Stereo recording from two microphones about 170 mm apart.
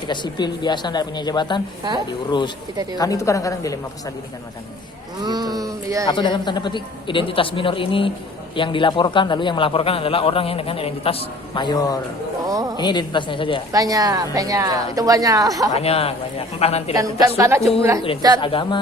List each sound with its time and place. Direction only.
0.1 s a man's voice: 25° left (ahead or behind)
3.0 s a man's voice: 20° left (ahead or behind)
5.2 s a woman's voice: 25° right (ahead or behind)
6.1 s a man's voice: 25° left (ahead or behind)
12.5 s a sound: 20° right (ahead or behind)
12.7 s a man's voice: 25° left (ahead or behind)
13.7 s a woman's voice: 20° right (ahead or behind)
15.7 s a man's voice: 35° left (ahead or behind)
16.9 s a woman's voice: 20° right (ahead or behind)
18.3 s a man's voice: 30° left (ahead or behind)